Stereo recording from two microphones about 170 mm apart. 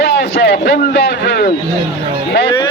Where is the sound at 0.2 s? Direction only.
80° left.